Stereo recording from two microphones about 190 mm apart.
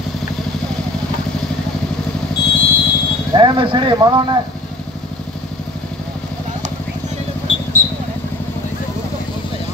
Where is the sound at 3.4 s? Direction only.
25° right (ahead or behind).